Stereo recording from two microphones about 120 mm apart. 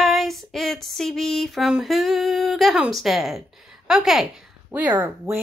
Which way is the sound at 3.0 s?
Centre (ahead or behind).